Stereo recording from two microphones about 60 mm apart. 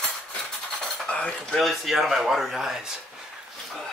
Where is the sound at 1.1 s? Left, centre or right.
Left.